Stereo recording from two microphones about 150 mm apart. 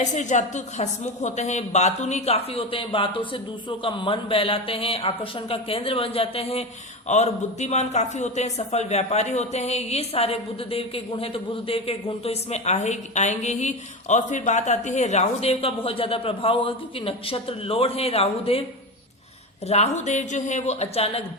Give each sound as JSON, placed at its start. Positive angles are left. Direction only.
{"t": 0.0, "sound": "a woman's voice", "side_deg": 50}
{"t": 19.6, "sound": "a man's voice", "side_deg": 45}